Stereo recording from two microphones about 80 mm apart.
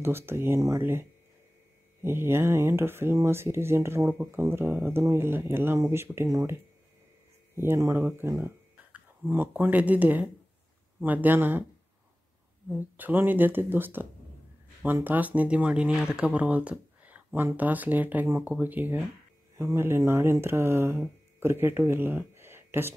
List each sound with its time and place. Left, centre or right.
0.0 s speech: right
2.0 s speech: right
12.7 s speech: right
19.5 s speech: right